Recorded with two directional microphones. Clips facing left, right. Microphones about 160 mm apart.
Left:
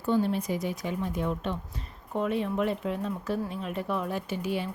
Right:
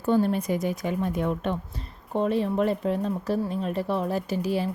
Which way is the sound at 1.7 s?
35° right (ahead or behind).